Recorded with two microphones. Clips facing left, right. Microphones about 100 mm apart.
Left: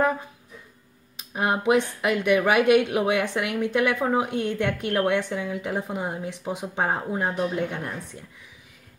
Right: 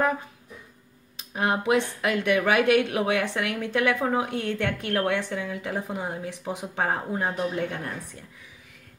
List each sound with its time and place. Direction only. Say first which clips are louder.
1.3 s a woman's voice: left 2 dB; 20° left (ahead or behind)